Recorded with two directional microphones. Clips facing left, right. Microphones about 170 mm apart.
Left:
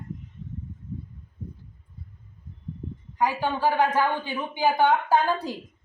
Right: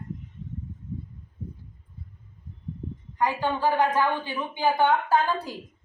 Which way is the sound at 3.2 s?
10° left (ahead or behind).